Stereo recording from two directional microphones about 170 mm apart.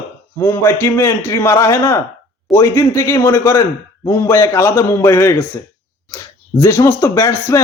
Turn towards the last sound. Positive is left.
turn(degrees=20)  # may be behind; listen again after turning